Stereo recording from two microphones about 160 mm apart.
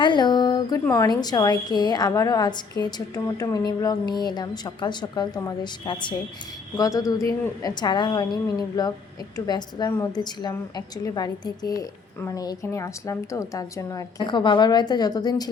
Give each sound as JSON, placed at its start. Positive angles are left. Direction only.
{"t": 0.0, "sound": "a woman's voice", "side_deg": 30}